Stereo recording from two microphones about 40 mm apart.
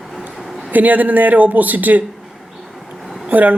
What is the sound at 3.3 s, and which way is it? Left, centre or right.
Speech, right.